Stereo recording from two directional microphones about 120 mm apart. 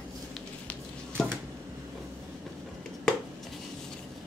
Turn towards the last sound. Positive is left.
turn(degrees=5)  # may be behind; listen again after turning